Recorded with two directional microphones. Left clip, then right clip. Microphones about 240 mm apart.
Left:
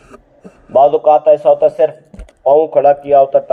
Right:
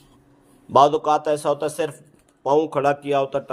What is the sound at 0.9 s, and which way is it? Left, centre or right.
A man's voice, right.